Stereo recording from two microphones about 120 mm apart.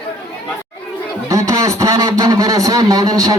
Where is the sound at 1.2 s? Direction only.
25° right (ahead or behind).